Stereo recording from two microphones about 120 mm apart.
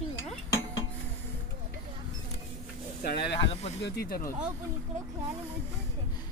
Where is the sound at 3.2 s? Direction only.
55° left (ahead or behind).